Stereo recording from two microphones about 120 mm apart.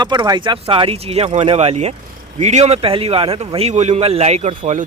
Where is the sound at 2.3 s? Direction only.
80° right; by 3.5 s 50° right (ahead or behind).